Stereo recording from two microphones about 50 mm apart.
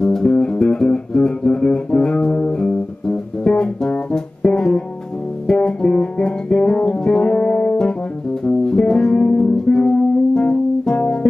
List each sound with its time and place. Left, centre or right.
0.0 s music: centre